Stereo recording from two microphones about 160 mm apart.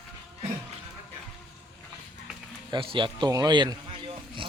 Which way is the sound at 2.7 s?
30° right (ahead or behind).